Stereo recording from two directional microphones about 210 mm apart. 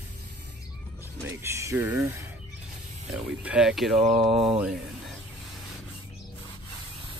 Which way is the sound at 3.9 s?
25° right (ahead or behind).